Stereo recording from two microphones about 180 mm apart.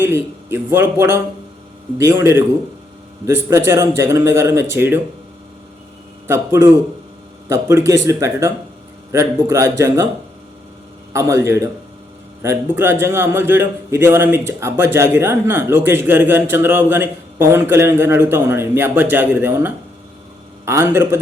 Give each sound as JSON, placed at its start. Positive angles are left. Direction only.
{"t": 0.0, "sound": "a man's voice", "side_deg": -15}
{"t": 3.2, "sound": "a man's voice", "side_deg": -15}
{"t": 6.2, "sound": "a man's voice", "side_deg": -15}
{"t": 11.1, "sound": "a man's voice", "side_deg": -15}